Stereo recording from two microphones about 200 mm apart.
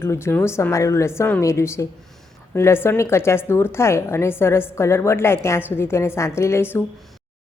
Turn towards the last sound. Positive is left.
turn(degrees=10)  # may be behind; listen again after turning